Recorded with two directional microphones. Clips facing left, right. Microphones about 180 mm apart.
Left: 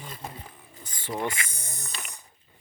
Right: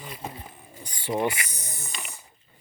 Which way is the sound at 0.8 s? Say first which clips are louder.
Right 5 dB; 15° right (ahead or behind).